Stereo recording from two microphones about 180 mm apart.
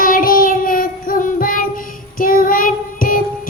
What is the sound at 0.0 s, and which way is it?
Child singing, 50° left (ahead or behind).